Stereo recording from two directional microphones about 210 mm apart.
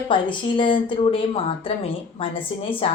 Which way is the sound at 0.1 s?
20° left (ahead or behind).